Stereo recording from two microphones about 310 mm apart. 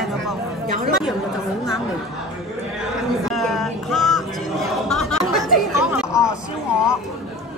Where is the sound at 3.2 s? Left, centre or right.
Centre.